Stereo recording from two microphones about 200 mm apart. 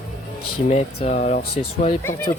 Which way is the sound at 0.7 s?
35° left (ahead or behind).